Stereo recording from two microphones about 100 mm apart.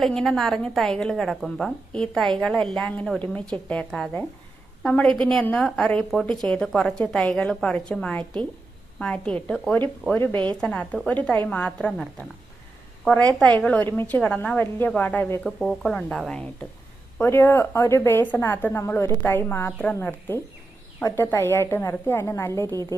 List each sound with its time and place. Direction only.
0.0 s a woman's voice: 5° left (ahead or behind)
13.4 s a woman's voice: 10° left (ahead or behind)
15.4 s a woman's voice: centre (ahead or behind)
17.2 s speech: 25° left (ahead or behind)
22.7 s a woman's voice: 40° right (ahead or behind)